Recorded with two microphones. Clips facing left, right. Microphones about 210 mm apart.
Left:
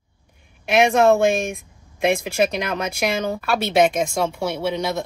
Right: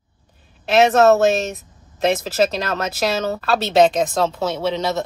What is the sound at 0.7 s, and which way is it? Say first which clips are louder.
Speech: right 2 dB; 15° left (ahead or behind).